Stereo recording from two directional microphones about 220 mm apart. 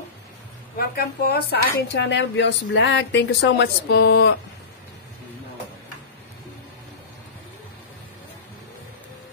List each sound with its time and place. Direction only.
0.7 s speech: 45° left (ahead or behind)